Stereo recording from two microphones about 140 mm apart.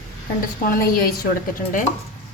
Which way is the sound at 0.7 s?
90° left.